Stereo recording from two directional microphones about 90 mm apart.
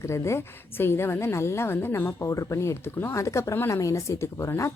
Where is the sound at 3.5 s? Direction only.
25° left (ahead or behind).